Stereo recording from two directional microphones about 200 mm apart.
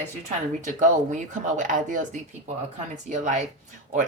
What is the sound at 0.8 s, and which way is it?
Speech, 40° right (ahead or behind).